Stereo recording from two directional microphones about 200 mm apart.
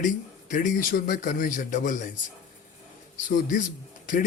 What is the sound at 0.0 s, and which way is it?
A man's voice, 40° left (ahead or behind).